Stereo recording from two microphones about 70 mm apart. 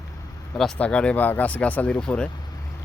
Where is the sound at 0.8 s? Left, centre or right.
Centre.